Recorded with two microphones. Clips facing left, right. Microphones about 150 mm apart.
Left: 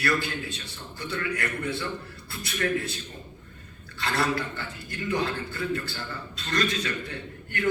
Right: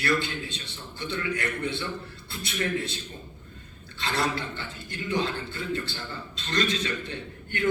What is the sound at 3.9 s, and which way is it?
A man's voice, 25° right (ahead or behind).